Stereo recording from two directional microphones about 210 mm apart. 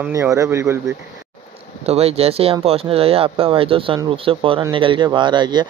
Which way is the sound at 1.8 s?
30° right (ahead or behind).